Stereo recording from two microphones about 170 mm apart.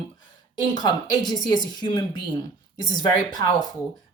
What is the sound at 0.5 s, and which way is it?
Speech, 25° left (ahead or behind).